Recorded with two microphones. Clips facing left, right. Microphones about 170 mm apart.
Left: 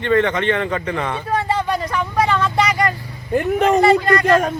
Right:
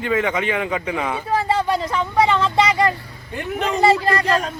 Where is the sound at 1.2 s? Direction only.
25° right (ahead or behind).